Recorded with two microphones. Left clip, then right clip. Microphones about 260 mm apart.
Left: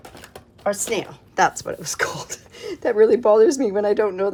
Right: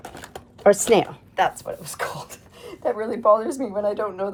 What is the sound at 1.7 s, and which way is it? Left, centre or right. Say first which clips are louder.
Speech: left 5 dB; left.